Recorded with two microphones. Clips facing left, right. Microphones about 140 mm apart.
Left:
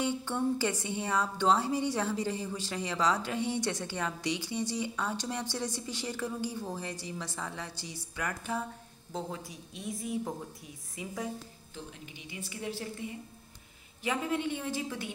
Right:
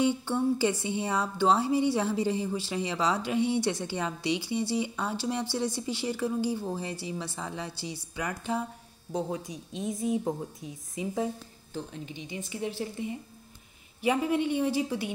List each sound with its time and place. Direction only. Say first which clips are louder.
0.0 s a woman's voice: right 5 dB; 15° right (ahead or behind)
14.0 s a woman's voice: right 6 dB; 15° right (ahead or behind)